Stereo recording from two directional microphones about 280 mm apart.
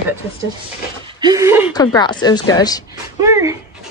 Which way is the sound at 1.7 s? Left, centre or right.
Centre.